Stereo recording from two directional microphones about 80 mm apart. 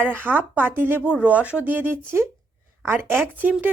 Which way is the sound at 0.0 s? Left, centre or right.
Right.